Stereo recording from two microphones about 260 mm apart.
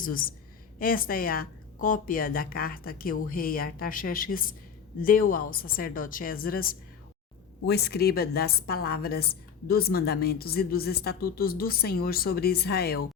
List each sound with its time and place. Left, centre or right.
0.0 s a woman's voice: left